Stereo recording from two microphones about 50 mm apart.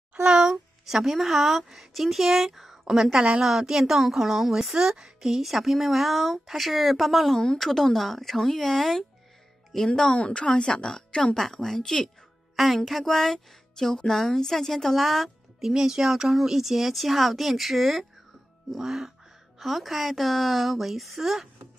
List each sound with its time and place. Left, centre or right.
0.1 s a woman's voice: centre
9.9 s a woman's voice: centre